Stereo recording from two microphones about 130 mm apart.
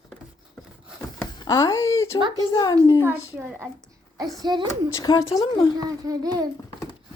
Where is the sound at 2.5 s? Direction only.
35° left (ahead or behind).